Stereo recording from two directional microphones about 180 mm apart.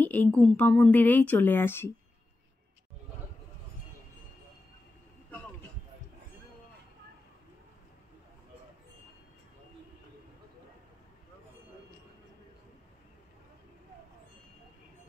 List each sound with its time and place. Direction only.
0.0 s a woman's voice: 10° left (ahead or behind)